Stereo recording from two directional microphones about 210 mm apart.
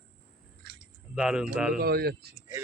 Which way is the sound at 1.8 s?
50° right (ahead or behind).